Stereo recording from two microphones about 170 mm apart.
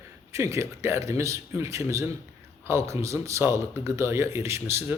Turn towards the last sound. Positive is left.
turn(degrees=-15)  # may be behind; listen again after turning